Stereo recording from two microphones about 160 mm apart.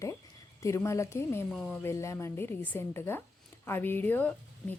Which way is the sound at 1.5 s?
5° left (ahead or behind).